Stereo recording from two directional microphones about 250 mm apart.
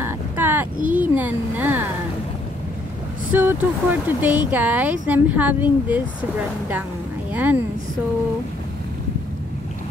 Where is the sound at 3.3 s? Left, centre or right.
Centre.